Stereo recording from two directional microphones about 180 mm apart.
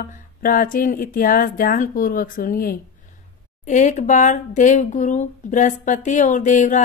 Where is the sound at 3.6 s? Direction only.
40° left (ahead or behind).